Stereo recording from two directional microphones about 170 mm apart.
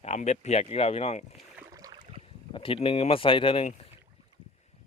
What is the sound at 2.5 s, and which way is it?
Speech, 30° left (ahead or behind).